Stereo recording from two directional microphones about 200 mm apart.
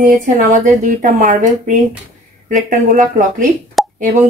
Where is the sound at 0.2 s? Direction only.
40° right (ahead or behind).